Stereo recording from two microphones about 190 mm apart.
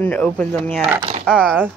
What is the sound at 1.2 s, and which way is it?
Speech, 5° right (ahead or behind).